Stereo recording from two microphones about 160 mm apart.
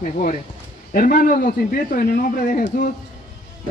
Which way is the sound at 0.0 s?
60° left (ahead or behind).